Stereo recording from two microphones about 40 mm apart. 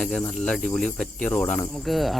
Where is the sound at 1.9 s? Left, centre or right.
Centre.